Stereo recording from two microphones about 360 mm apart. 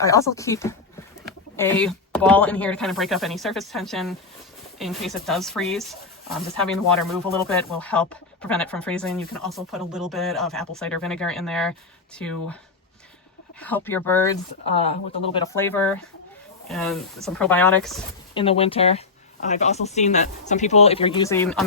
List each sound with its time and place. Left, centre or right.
0.0 s speech: centre
13.6 s speech: centre
18.3 s speech: centre